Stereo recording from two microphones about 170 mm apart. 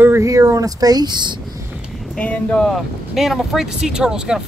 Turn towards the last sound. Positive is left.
turn(degrees=-5)  # may be behind; listen again after turning